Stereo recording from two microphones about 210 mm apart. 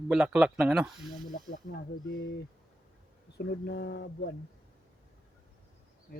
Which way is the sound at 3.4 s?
50° left (ahead or behind).